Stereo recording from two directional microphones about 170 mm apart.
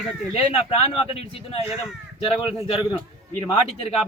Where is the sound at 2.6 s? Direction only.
35° left (ahead or behind).